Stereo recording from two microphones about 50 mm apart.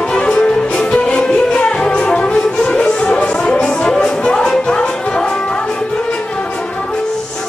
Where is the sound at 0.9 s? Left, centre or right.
Left.